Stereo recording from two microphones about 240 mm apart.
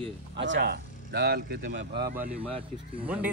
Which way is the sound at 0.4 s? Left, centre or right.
Right.